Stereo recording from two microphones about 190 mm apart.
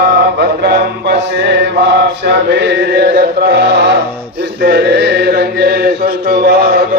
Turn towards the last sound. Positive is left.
turn(degrees=-60)  # may be behind; listen again after turning